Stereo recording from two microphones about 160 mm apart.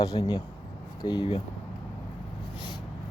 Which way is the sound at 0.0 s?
25° left (ahead or behind).